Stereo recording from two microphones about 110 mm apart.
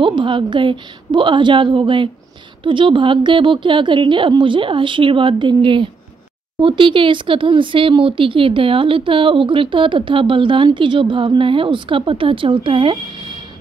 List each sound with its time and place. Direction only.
0.0 s speech: 50° right (ahead or behind)